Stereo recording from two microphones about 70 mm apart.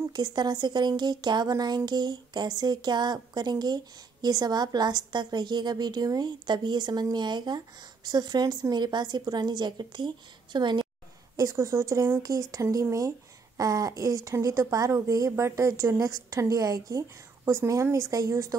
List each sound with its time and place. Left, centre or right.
0.1 s a woman's voice: right
11.3 s speech: right
16.0 s speech: right